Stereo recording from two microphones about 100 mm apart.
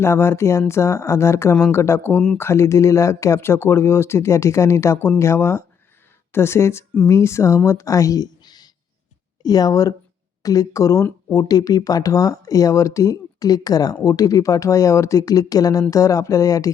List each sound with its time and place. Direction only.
0.0 s speech: 25° left (ahead or behind)